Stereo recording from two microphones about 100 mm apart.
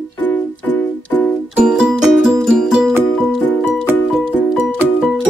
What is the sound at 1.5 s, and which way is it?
Music, 10° right (ahead or behind).